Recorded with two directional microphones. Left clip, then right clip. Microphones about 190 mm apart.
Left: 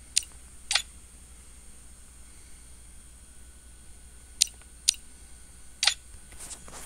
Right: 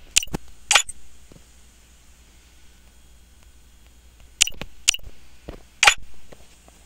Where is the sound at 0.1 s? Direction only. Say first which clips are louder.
Right 9 dB; 5° right (ahead or behind).